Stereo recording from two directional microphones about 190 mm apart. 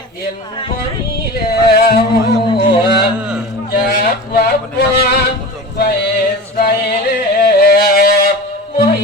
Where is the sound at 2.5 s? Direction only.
25° left (ahead or behind).